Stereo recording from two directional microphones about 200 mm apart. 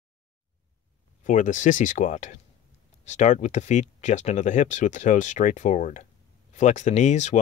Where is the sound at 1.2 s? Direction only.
40° left (ahead or behind).